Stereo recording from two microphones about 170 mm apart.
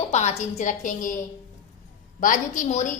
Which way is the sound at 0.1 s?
40° left (ahead or behind).